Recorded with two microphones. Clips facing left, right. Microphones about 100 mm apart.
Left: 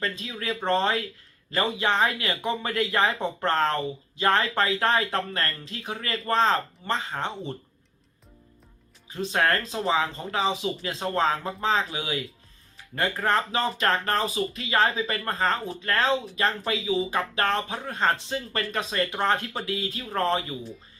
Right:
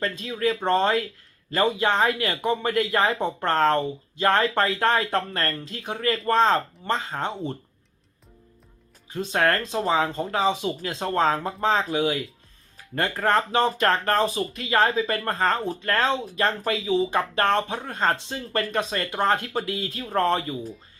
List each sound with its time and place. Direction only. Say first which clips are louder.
0.0 s speech: right 6 dB; 35° right (ahead or behind)
2.6 s speech: even; 35° right (ahead or behind)
9.1 s speech: right 2 dB; 35° right (ahead or behind)